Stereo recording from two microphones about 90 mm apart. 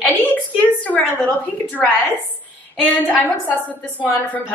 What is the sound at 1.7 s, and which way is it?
A woman's voice, 20° left (ahead or behind).